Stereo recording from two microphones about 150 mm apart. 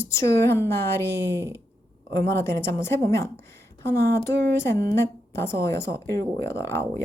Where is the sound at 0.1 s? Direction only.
20° left (ahead or behind).